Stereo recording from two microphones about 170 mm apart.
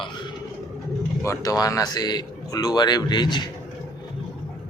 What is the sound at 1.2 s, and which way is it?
A man's voice, 20° left (ahead or behind).